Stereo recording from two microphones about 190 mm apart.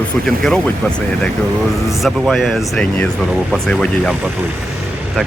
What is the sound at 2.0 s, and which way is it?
Speech, centre (ahead or behind).